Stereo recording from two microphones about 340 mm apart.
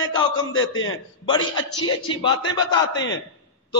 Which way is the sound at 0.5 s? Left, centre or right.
Left.